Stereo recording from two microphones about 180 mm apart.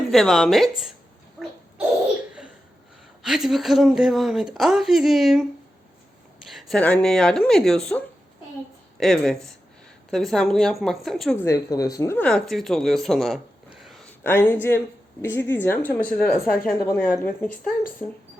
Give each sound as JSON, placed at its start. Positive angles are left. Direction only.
{"t": 0.1, "sound": "speech", "side_deg": 0}
{"t": 3.2, "sound": "speech", "side_deg": 0}
{"t": 6.5, "sound": "speech", "side_deg": 0}
{"t": 11.3, "sound": "speech", "side_deg": 15}
{"t": 14.3, "sound": "speech", "side_deg": 10}